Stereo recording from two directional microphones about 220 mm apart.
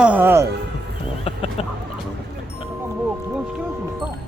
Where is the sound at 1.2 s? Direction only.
25° left (ahead or behind).